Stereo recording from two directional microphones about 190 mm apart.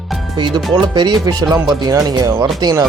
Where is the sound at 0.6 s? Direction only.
Centre (ahead or behind).